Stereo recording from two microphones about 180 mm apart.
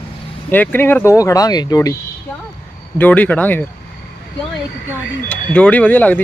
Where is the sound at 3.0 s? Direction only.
10° left (ahead or behind).